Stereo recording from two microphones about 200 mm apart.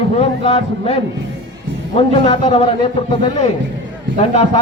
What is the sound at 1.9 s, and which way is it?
Speech, 30° left (ahead or behind).